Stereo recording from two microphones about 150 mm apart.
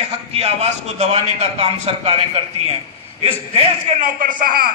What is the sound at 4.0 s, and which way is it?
Speech, 65° right (ahead or behind).